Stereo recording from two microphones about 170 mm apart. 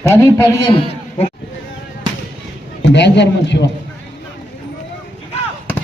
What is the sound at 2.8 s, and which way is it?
Speech, 90° left.